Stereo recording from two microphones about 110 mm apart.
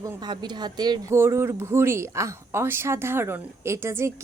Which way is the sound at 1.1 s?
25° right (ahead or behind).